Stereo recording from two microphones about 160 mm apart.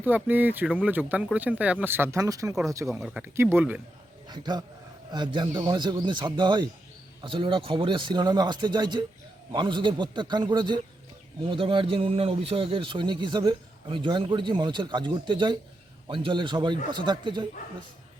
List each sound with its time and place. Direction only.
0.0 s a man's voice: 10° right (ahead or behind)
3.0 s speech: 5° right (ahead or behind)
4.3 s a man's voice: 25° right (ahead or behind)